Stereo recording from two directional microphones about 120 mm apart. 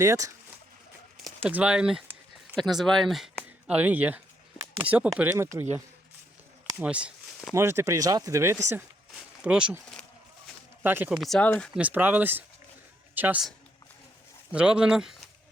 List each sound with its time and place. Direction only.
0.0 s speech: 25° right (ahead or behind)
1.5 s speech: 10° right (ahead or behind)
3.7 s speech: 15° right (ahead or behind)
5.4 s speech: 20° right (ahead or behind)
6.7 s speech: 10° right (ahead or behind)
7.5 s speech: 20° right (ahead or behind)
9.1 s a sound: 5° right (ahead or behind)
10.8 s speech: 15° right (ahead or behind)
11.1 s speech: centre (ahead or behind)
11.4 s speech: 15° left (ahead or behind)
11.7 s speech: 10° right (ahead or behind)
14.5 s speech: 5° right (ahead or behind)